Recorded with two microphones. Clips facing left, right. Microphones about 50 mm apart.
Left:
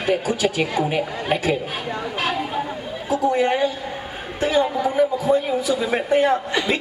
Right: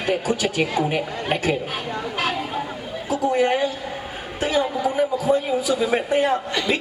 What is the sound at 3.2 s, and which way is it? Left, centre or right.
A man's voice, centre.